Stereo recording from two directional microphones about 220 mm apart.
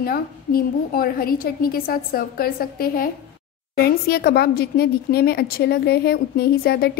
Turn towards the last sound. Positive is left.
turn(degrees=45)  # may be behind; listen again after turning